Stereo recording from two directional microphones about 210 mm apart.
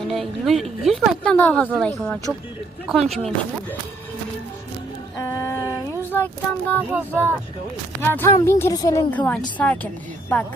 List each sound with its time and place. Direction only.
0.1 s speech: centre (ahead or behind)
5.1 s a sound: 15° left (ahead or behind)
6.7 s speech: 10° left (ahead or behind)